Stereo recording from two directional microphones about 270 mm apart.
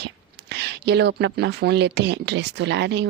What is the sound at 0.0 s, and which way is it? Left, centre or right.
Speech, right.